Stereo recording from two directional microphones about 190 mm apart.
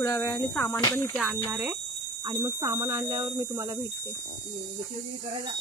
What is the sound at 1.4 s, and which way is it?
Speech, 10° right (ahead or behind).